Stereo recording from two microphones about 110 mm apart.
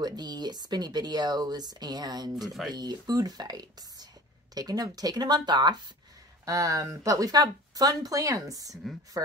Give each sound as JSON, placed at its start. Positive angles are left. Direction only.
{"t": 0.0, "sound": "speech", "side_deg": -40}
{"t": 2.4, "sound": "speech", "side_deg": 0}
{"t": 2.7, "sound": "speech", "side_deg": -40}
{"t": 6.4, "sound": "speech", "side_deg": -30}